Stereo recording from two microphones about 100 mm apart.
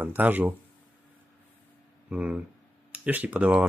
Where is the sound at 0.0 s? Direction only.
20° right (ahead or behind).